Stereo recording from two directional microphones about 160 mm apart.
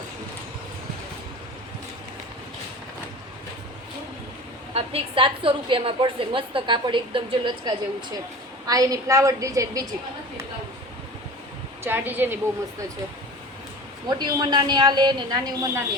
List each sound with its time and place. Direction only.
4.7 s a woman's voice: 35° right (ahead or behind); by 9.9 s 20° right (ahead or behind)
11.8 s a woman's voice: 15° right (ahead or behind)
14.1 s speech: 25° right (ahead or behind)